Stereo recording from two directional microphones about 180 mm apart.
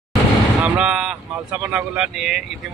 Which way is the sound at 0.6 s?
5° right (ahead or behind).